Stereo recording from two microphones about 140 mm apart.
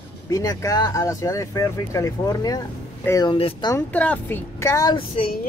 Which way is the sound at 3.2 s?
40° left (ahead or behind).